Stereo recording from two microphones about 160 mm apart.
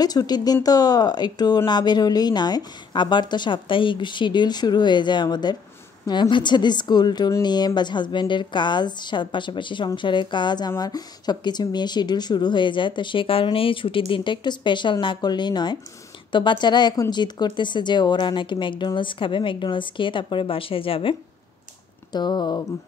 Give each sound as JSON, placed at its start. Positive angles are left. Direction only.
{"t": 0.0, "sound": "a woman's voice", "side_deg": 25}